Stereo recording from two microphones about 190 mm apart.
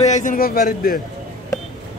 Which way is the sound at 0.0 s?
40° left (ahead or behind).